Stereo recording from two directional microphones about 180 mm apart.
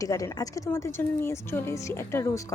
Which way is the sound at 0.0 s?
20° left (ahead or behind).